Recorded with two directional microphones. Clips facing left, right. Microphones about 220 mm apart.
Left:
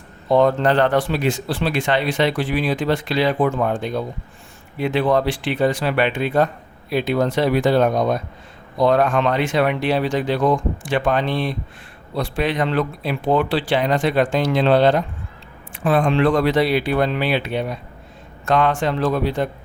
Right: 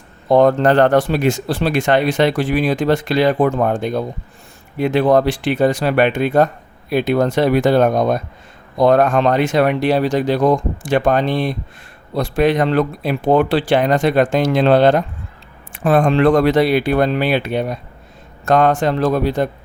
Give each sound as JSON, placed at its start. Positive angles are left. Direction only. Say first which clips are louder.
{"t": 0.3, "sound": "speech", "louder": "right 4 dB", "side_deg": -45}